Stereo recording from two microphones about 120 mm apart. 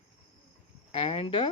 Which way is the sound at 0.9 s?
50° left (ahead or behind).